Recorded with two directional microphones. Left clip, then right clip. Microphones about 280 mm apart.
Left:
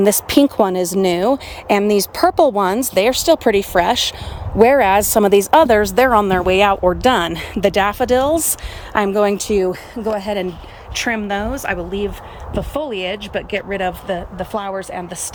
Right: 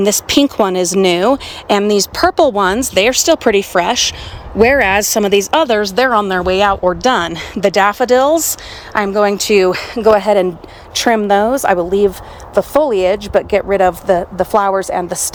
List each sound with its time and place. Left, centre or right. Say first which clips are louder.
0.0 s speech: right 1 dB; centre